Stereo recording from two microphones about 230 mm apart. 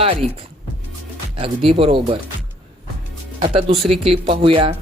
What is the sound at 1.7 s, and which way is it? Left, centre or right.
Speech, right.